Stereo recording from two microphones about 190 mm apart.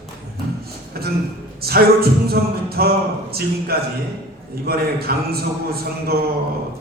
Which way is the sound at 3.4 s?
55° right (ahead or behind).